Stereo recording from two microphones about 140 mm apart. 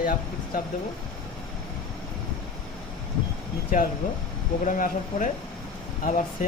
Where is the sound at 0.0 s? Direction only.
75° left (ahead or behind).